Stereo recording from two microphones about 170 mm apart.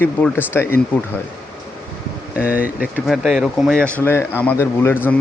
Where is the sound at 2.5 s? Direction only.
60° left (ahead or behind).